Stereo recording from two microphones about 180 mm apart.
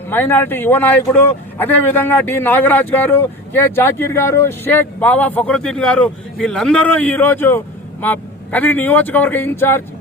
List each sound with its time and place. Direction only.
0.1 s a man's voice: 10° left (ahead or behind)